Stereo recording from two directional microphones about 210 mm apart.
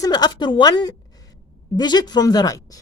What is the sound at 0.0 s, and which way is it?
A woman's voice, 20° left (ahead or behind).